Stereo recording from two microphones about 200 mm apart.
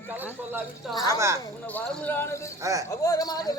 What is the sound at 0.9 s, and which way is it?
A woman's voice, 20° left (ahead or behind).